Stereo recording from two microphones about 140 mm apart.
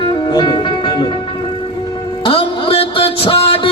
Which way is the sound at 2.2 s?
40° left (ahead or behind).